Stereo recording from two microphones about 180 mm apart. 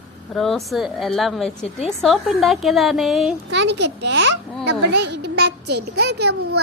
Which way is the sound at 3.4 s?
75° right (ahead or behind).